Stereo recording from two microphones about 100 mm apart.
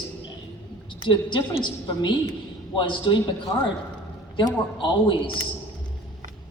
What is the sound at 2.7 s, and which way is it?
Speech, 50° left (ahead or behind).